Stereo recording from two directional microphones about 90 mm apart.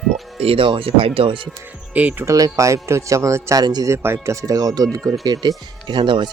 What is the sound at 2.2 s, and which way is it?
Speech, 35° right (ahead or behind).